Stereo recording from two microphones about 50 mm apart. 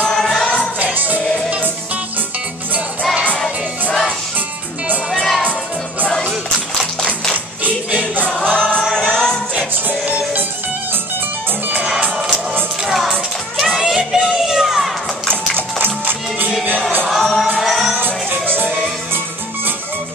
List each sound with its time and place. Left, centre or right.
0.1 s music: centre
0.9 s music: right
5.1 s music: centre
8.3 s choir: centre
8.9 s music: centre
9.8 s music: right
12.8 s music: centre
15.5 s music: right
17.1 s music: centre
17.9 s music: right